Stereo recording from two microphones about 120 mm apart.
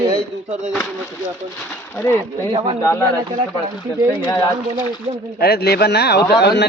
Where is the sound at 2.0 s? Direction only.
20° left (ahead or behind).